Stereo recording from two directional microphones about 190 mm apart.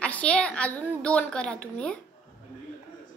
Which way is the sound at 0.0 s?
5° left (ahead or behind).